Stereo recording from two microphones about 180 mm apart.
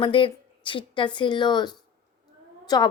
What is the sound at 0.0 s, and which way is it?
A woman's voice, 30° left (ahead or behind).